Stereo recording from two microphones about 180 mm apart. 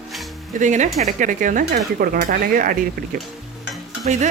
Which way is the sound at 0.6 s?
40° right (ahead or behind).